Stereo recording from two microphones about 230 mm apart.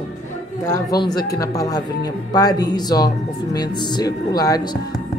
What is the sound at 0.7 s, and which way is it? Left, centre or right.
A man's voice, centre.